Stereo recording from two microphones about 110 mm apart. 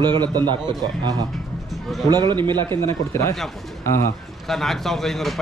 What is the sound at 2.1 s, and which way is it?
Speech, 40° right (ahead or behind).